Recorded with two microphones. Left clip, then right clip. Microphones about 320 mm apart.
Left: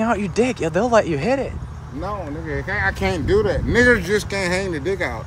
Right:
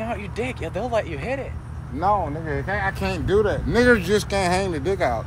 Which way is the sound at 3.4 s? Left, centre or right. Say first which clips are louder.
Left 2 dB; centre.